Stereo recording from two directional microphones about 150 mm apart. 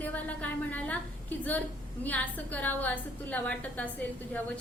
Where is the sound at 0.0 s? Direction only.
10° left (ahead or behind).